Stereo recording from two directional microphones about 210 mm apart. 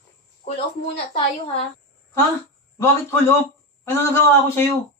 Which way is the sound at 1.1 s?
25° left (ahead or behind).